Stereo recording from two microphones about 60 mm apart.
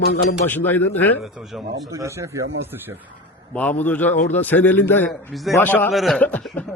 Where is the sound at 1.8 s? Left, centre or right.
Right.